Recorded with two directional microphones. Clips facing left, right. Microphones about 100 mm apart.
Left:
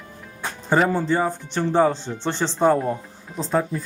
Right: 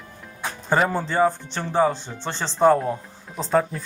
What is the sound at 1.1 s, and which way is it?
Speech, 10° left (ahead or behind).